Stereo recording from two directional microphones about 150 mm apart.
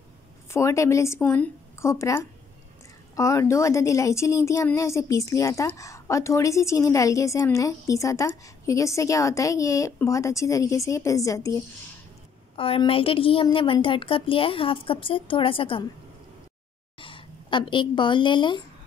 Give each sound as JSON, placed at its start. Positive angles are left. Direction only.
{"t": 0.5, "sound": "a woman's voice", "side_deg": 20}
{"t": 12.5, "sound": "a woman's voice", "side_deg": 35}
{"t": 17.0, "sound": "speech", "side_deg": 35}